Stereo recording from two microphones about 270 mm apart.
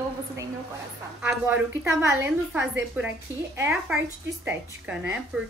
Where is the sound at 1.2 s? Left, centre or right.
Centre.